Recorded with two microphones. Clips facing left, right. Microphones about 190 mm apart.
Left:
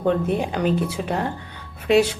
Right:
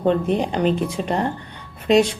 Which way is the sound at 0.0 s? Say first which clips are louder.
Right 2 dB; 20° right (ahead or behind).